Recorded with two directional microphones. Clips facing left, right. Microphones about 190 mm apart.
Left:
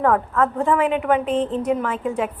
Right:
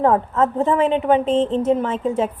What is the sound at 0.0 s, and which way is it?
A woman's voice, 25° right (ahead or behind).